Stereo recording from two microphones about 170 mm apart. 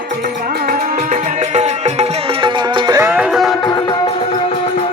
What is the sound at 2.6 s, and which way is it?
Music, 25° right (ahead or behind).